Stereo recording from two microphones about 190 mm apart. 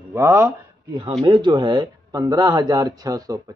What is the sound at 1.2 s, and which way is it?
A man's voice, 25° right (ahead or behind).